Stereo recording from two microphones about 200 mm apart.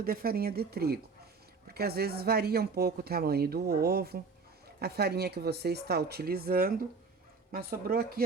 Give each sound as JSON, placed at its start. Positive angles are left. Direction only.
{"t": 0.0, "sound": "speech", "side_deg": -45}